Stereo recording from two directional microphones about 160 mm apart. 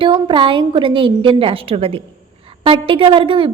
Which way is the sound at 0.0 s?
30° right (ahead or behind).